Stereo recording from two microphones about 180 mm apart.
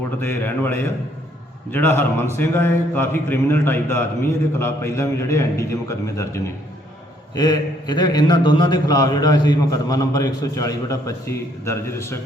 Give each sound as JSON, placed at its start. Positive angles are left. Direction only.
{"t": 0.2, "sound": "a man's voice", "side_deg": 10}